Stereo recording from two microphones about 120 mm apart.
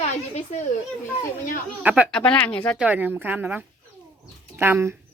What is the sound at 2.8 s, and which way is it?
A woman's voice, 10° right (ahead or behind).